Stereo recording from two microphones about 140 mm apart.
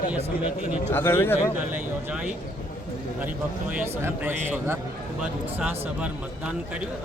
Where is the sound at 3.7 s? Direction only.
15° right (ahead or behind).